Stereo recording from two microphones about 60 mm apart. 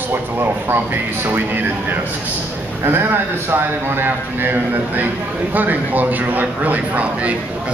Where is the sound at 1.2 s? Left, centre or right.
Right.